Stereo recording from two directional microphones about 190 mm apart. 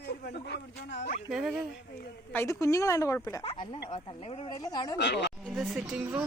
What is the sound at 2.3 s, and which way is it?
Speech, 15° left (ahead or behind).